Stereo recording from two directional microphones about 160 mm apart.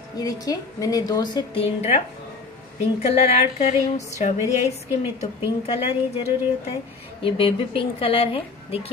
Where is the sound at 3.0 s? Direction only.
40° left (ahead or behind).